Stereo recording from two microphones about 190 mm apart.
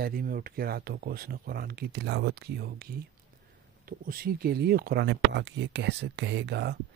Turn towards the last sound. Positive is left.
turn(degrees=-65)  # may be behind; listen again after turning